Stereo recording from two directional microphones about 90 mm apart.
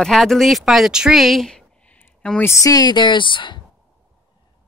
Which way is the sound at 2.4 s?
40° left (ahead or behind).